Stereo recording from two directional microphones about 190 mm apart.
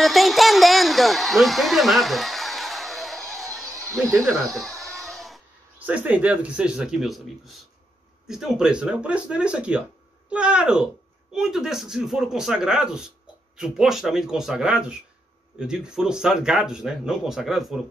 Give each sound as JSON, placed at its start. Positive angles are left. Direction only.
{"t": 0.0, "sound": "a sound", "side_deg": 0}
{"t": 4.1, "sound": "speech", "side_deg": -15}
{"t": 4.6, "sound": "speech", "side_deg": 0}